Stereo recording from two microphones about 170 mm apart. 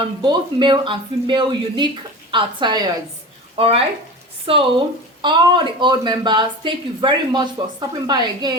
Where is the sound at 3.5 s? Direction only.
35° right (ahead or behind).